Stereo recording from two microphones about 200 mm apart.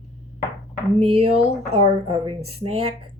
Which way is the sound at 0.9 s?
30° right (ahead or behind).